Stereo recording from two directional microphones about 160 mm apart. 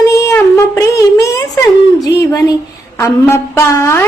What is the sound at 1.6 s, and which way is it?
Speech, 20° left (ahead or behind).